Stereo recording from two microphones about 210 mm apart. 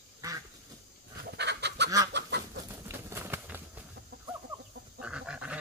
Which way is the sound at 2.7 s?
10° right (ahead or behind).